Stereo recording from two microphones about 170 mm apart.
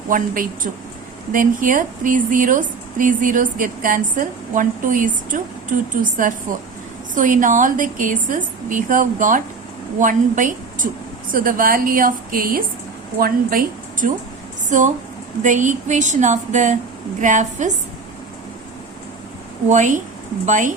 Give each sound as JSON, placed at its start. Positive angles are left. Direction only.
{"t": 0.1, "sound": "a woman's voice", "side_deg": -50}
{"t": 15.4, "sound": "speech", "side_deg": -50}
{"t": 19.6, "sound": "speech", "side_deg": -45}